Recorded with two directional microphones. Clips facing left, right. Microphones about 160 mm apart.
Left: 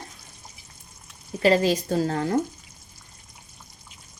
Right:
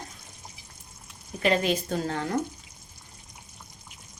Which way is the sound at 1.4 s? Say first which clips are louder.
Left 5 dB; 35° left (ahead or behind).